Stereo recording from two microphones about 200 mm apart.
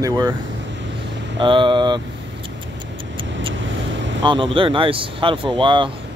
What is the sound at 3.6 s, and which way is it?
Vehicle, 65° right (ahead or behind).